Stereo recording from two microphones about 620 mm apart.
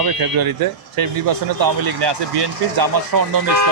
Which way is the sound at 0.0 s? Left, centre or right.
Right.